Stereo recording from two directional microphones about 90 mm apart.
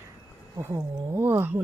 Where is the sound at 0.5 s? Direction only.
30° right (ahead or behind).